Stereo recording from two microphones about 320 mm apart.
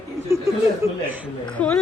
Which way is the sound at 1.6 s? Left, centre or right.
Centre.